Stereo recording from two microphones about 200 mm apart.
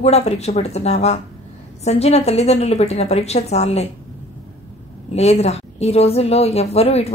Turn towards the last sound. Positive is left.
turn(degrees=30)  # may be behind; listen again after turning